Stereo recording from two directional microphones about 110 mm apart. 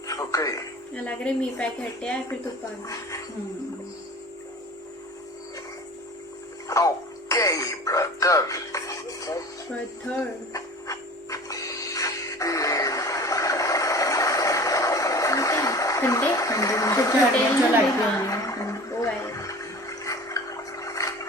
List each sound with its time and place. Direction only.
0.1 s music: 30° left (ahead or behind)
1.0 s speech: 10° left (ahead or behind)
2.8 s a woman's voice: 30° left (ahead or behind)
6.7 s music: 30° left (ahead or behind)
10.2 s a sound: 30° left (ahead or behind)
18.3 s toilet flush: 30° left (ahead or behind)